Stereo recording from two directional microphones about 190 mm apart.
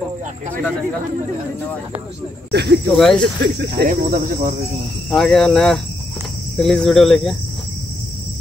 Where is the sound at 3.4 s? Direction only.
60° right (ahead or behind).